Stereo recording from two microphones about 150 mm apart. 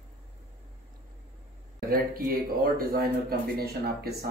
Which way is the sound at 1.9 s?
80° right.